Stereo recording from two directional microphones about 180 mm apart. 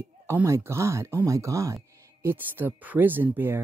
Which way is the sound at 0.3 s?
15° right (ahead or behind).